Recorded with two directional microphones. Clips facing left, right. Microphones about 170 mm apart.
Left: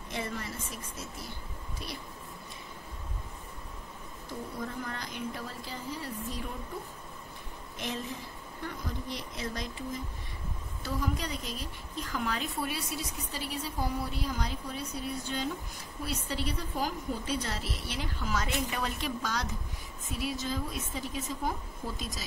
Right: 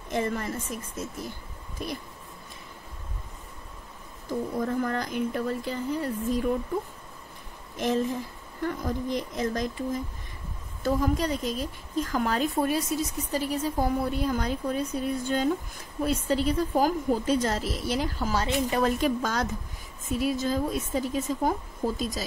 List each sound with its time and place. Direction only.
0.1 s a woman's voice: 50° right (ahead or behind)
4.6 s a woman's voice: 50° right (ahead or behind)
7.7 s a woman's voice: 45° right (ahead or behind)